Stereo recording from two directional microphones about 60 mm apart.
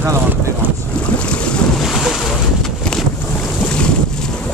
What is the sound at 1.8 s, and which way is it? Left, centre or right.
Boat, centre.